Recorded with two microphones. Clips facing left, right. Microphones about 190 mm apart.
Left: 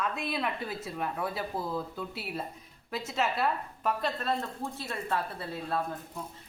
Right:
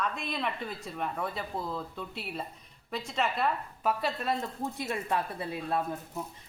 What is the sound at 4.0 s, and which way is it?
A woman's voice, 10° right (ahead or behind).